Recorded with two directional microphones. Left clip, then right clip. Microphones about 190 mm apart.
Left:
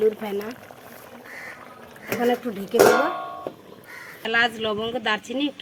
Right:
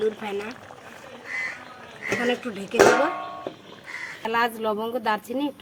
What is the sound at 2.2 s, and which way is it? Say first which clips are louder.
Speech: left 3 dB; 30° left (ahead or behind).